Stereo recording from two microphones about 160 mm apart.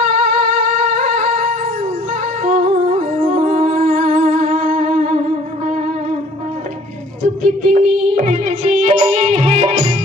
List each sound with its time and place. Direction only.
0.1 s music: 50° right (ahead or behind)
7.4 s music: 50° right (ahead or behind)